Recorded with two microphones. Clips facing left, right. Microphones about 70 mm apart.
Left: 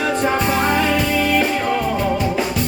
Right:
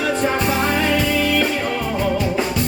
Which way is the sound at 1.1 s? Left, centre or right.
Left.